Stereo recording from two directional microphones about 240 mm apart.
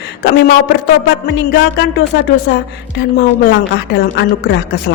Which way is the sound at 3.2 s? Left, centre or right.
Left.